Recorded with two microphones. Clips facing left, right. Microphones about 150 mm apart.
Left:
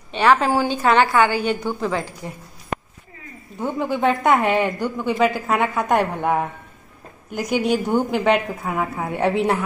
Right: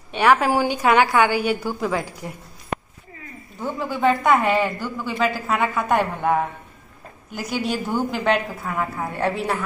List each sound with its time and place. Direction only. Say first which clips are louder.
0.1 s a woman's voice: left 1 dB; 10° right (ahead or behind)
3.6 s a woman's voice: left 1 dB; 20° left (ahead or behind); by 9.3 s centre (ahead or behind)
9.3 s a woman's voice: left 5 dB; 20° left (ahead or behind)